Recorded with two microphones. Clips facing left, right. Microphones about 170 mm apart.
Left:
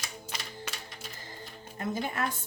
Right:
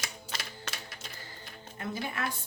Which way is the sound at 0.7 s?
10° left (ahead or behind).